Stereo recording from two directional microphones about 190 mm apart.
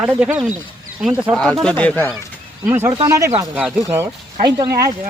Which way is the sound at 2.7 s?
15° right (ahead or behind).